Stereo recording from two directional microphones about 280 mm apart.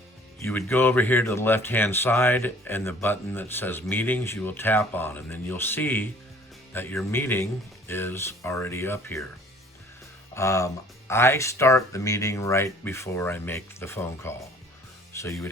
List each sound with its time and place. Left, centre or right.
0.4 s speech: centre
10.3 s speech: centre